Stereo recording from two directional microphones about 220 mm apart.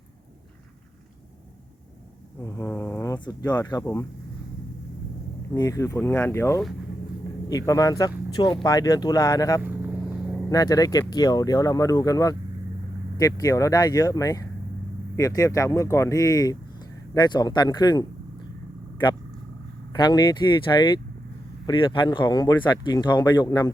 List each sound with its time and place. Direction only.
2.4 s speech: 15° left (ahead or behind)
5.5 s speech: 15° left (ahead or behind)
9.6 s vehicle: 10° right (ahead or behind)
10.5 s speech: 15° left (ahead or behind)
19.9 s speech: 20° left (ahead or behind)